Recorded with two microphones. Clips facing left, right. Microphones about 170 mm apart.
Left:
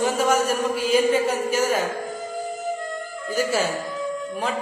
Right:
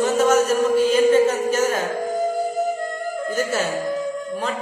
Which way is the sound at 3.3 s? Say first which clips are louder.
Left 2 dB; 10° left (ahead or behind).